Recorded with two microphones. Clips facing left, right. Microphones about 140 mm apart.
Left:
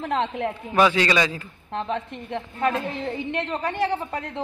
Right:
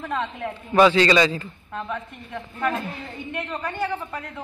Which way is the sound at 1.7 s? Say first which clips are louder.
Left 4 dB; 30° left (ahead or behind).